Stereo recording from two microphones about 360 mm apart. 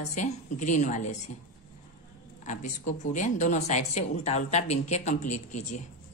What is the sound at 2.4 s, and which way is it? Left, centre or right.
Speech, left.